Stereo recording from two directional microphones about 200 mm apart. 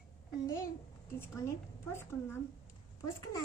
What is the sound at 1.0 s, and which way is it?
A woman's voice, 10° left (ahead or behind).